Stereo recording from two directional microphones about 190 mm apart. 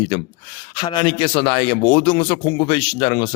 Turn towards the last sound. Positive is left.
turn(degrees=20)  # may be behind; listen again after turning